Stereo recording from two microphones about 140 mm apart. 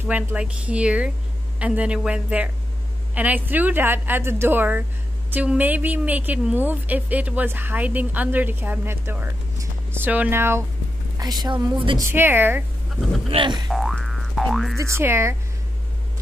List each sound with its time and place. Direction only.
0.1 s a woman's voice: 10° right (ahead or behind)
11.1 s speech: 30° right (ahead or behind)
12.1 s a woman's voice: 15° right (ahead or behind)
13.3 s speech: 35° right (ahead or behind)
13.7 s boing: centre (ahead or behind)
14.8 s speech: 15° right (ahead or behind)